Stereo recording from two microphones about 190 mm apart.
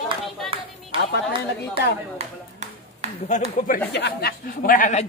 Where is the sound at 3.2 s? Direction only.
40° left (ahead or behind).